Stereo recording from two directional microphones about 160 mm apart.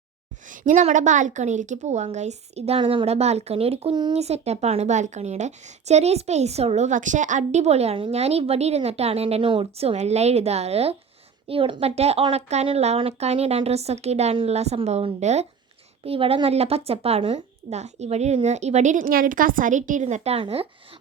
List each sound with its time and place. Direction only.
0.4 s a woman's voice: 55° right (ahead or behind); by 20.7 s 35° right (ahead or behind)